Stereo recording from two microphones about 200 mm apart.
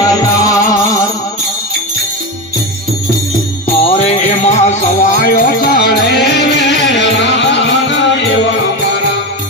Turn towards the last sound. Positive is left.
turn(degrees=60)  # may be behind; listen again after turning